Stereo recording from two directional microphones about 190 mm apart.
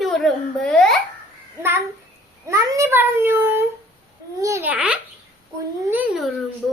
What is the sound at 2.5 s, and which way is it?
A child's voice, 15° right (ahead or behind).